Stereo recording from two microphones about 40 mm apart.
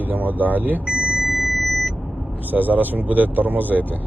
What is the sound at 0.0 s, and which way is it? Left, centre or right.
Speech, right.